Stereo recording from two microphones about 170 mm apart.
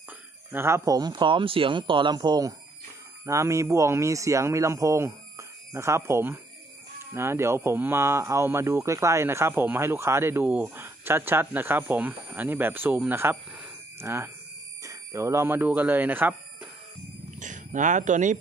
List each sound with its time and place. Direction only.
0.5 s speech: 15° right (ahead or behind)
17.4 s speech: 50° right (ahead or behind)